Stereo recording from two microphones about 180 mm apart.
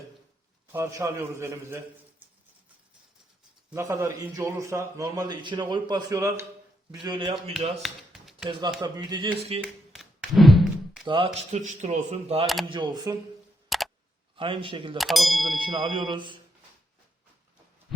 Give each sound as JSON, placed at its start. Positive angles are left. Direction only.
{"t": 0.7, "sound": "a man's voice", "side_deg": -15}
{"t": 3.7, "sound": "a man's voice", "side_deg": -15}
{"t": 7.8, "sound": "tap", "side_deg": 0}
{"t": 8.8, "sound": "speech", "side_deg": -25}
{"t": 9.9, "sound": "thunk", "side_deg": 0}
{"t": 11.0, "sound": "speech", "side_deg": -30}
{"t": 11.6, "sound": "speech", "side_deg": -40}
{"t": 13.7, "sound": "camera", "side_deg": 0}
{"t": 14.3, "sound": "speech", "side_deg": -30}
{"t": 14.9, "sound": "speech", "side_deg": 0}
{"t": 15.4, "sound": "speech", "side_deg": -25}